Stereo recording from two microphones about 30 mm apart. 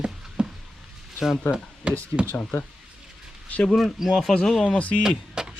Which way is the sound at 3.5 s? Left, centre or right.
Left.